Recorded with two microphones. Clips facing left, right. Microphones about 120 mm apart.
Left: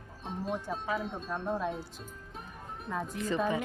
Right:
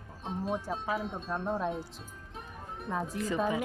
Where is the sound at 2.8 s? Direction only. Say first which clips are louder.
Right 1 dB; 5° right (ahead or behind).